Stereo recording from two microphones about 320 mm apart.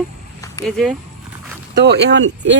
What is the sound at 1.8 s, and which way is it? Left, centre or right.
Speech, right.